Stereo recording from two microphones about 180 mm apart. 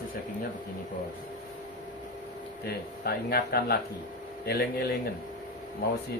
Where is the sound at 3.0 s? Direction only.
60° left (ahead or behind).